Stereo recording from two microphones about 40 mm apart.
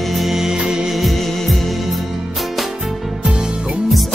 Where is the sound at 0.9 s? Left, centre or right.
Centre.